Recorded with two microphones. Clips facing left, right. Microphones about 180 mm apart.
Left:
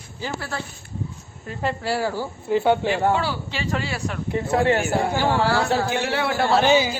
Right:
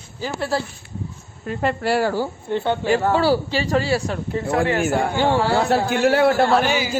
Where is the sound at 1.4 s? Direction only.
60° right (ahead or behind).